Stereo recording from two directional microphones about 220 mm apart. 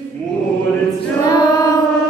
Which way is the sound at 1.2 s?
15° left (ahead or behind).